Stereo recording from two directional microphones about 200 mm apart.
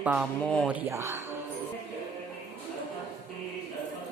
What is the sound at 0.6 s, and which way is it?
Speech, 10° right (ahead or behind).